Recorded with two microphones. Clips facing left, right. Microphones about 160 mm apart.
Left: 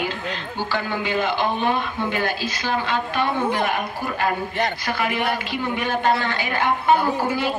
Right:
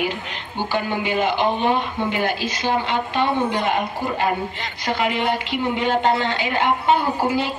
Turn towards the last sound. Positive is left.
turn(degrees=-20)  # may be behind; listen again after turning